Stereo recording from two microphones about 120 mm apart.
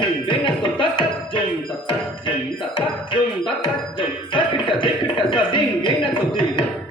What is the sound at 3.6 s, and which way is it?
Music, 45° left (ahead or behind).